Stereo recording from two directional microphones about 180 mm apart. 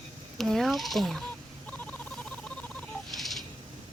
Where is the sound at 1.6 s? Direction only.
5° left (ahead or behind).